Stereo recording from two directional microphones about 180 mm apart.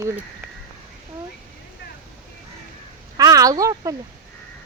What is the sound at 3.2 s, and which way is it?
Speech, 20° right (ahead or behind).